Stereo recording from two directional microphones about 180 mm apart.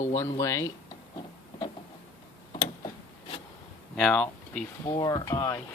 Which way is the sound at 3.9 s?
5° left (ahead or behind).